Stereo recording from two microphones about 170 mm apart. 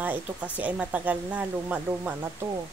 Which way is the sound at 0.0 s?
10° right (ahead or behind).